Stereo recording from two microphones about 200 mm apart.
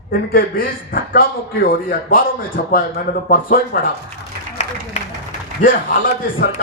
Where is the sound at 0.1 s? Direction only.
45° left (ahead or behind).